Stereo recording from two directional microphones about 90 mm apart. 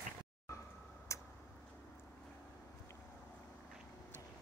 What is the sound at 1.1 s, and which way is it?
Tick-tock, 35° left (ahead or behind).